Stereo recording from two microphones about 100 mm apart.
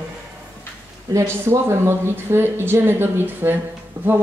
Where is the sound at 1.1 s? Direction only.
25° right (ahead or behind).